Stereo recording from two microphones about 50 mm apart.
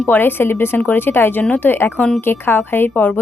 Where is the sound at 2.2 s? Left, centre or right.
Left.